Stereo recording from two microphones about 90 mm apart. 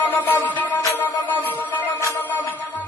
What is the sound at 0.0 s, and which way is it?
Music, 20° left (ahead or behind).